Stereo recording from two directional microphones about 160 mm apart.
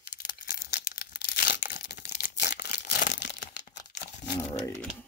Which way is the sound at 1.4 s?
75° left (ahead or behind).